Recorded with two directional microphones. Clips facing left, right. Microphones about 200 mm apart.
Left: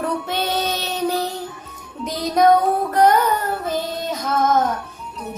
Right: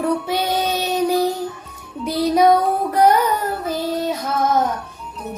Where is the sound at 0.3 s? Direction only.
10° right (ahead or behind).